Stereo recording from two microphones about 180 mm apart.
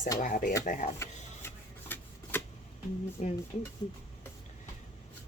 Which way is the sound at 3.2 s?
40° left (ahead or behind).